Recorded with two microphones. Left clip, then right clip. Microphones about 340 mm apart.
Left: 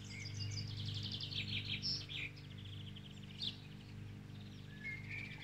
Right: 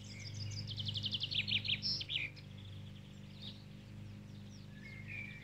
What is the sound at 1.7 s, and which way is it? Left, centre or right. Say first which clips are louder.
Bird: right 5 dB; right.